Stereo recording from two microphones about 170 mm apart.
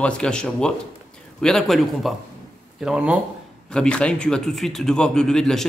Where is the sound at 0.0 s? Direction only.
5° left (ahead or behind).